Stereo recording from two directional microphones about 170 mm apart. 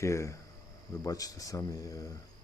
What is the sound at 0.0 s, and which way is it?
Speech, 15° left (ahead or behind).